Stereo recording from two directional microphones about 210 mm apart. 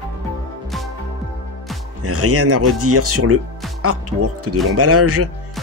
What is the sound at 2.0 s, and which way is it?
Speech, 90° right.